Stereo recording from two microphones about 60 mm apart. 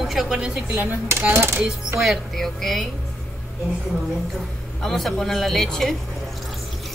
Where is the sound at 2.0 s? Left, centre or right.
Centre.